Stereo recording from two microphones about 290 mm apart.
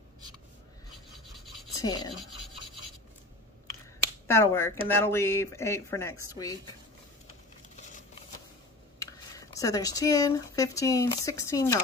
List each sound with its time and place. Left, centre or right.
1.8 s speech: centre
4.3 s speech: centre
7.7 s a sound: left
9.0 s speech: centre